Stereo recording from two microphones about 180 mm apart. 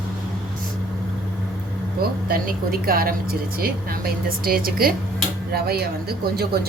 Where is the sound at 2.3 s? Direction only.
55° right (ahead or behind).